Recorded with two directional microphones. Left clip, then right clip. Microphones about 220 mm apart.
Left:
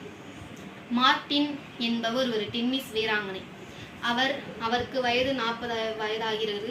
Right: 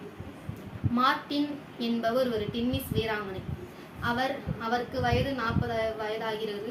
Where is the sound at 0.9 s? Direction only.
20° right (ahead or behind).